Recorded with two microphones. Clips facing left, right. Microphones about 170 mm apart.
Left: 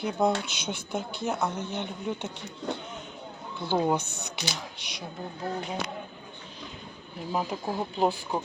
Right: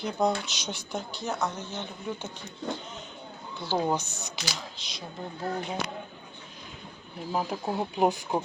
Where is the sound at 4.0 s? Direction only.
60° left (ahead or behind).